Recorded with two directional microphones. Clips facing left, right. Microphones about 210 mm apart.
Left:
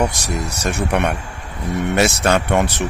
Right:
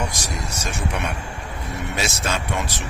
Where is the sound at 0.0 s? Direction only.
65° left (ahead or behind).